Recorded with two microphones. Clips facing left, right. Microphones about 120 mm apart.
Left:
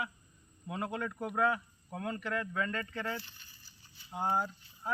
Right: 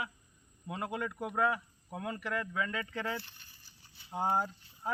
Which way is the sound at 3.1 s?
60° right (ahead or behind).